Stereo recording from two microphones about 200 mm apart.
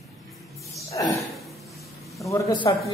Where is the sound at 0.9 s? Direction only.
15° left (ahead or behind).